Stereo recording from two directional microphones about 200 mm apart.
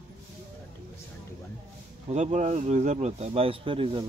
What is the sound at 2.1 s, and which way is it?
Speech, 35° right (ahead or behind).